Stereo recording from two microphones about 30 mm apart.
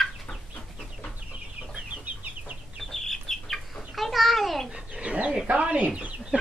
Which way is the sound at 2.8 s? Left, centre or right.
Centre.